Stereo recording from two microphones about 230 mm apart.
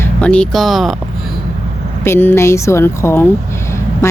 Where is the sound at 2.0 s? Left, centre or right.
Centre.